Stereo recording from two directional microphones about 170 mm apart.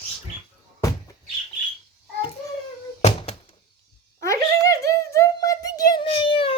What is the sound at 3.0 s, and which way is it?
Thunk, 35° left (ahead or behind).